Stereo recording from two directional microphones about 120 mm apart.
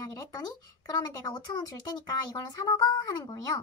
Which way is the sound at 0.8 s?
35° left (ahead or behind).